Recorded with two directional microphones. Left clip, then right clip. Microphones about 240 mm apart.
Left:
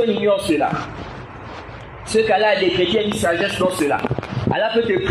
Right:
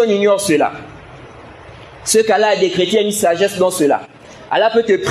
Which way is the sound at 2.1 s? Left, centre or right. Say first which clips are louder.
Right 3 dB; right.